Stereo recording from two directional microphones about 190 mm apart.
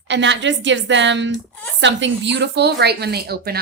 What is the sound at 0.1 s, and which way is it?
A woman's voice, 70° right (ahead or behind).